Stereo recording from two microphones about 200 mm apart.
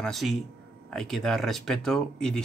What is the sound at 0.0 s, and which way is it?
Speech, centre (ahead or behind).